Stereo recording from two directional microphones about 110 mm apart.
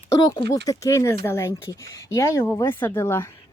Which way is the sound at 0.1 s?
35° left (ahead or behind).